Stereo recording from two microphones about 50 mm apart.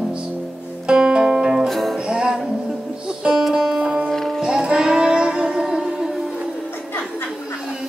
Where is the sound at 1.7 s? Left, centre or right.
Centre.